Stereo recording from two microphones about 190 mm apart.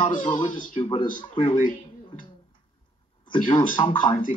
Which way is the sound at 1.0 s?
45° left (ahead or behind).